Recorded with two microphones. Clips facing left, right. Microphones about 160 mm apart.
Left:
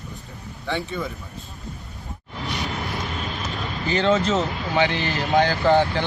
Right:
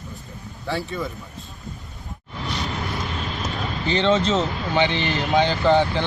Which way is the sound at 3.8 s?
25° right (ahead or behind).